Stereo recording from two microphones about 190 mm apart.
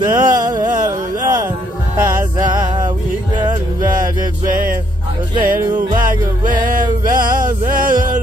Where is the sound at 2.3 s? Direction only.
20° right (ahead or behind).